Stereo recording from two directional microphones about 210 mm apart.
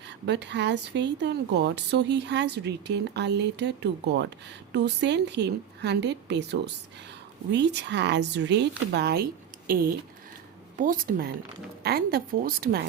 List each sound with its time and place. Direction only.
0.3 s a woman's voice: 55° right (ahead or behind)